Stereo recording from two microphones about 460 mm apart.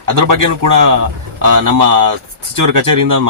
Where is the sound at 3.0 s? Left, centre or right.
Right.